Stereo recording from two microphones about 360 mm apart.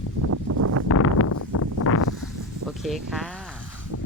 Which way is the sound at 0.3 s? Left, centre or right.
Right.